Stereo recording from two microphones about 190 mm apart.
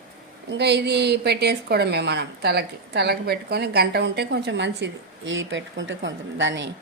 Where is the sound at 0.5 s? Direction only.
60° right (ahead or behind).